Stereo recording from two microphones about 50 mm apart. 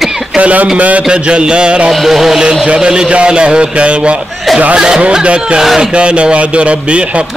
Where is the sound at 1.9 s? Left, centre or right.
Centre; by 4.2 s right.